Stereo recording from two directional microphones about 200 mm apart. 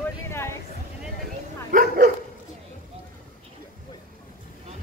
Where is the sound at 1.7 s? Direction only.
45° right (ahead or behind).